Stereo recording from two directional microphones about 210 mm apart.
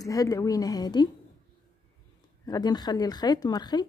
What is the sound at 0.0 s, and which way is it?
A woman's voice, 15° left (ahead or behind).